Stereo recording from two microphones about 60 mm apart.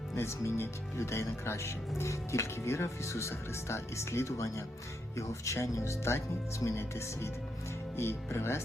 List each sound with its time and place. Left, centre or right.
0.2 s speech: left